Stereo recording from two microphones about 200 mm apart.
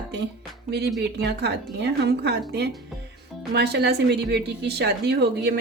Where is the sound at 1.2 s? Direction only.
55° right (ahead or behind).